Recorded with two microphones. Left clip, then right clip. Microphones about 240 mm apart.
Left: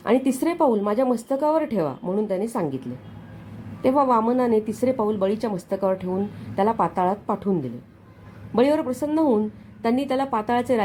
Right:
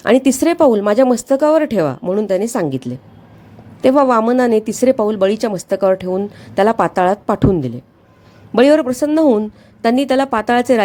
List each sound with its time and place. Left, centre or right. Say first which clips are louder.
0.0 s speech: right 9 dB; right